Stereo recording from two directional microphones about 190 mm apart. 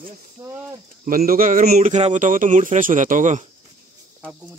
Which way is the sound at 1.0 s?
50° right (ahead or behind).